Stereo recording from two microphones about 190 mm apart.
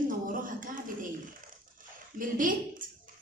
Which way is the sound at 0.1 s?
45° right (ahead or behind).